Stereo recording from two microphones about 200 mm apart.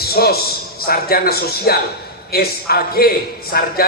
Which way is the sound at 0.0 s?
50° left (ahead or behind).